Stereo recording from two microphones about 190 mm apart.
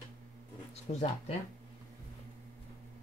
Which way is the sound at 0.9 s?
35° left (ahead or behind).